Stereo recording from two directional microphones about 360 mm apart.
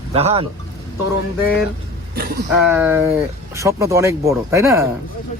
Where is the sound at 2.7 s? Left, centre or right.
Centre.